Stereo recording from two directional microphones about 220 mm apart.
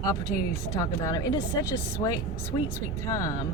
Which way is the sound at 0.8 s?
15° left (ahead or behind).